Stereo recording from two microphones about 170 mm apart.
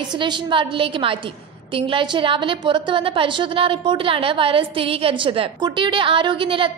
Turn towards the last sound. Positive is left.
turn(degrees=-30)  # may be behind; listen again after turning